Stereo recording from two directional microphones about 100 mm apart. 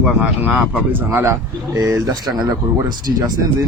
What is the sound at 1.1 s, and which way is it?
A man's voice, 25° right (ahead or behind).